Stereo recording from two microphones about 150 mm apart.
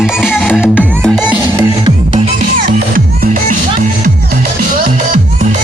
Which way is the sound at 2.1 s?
50° right (ahead or behind).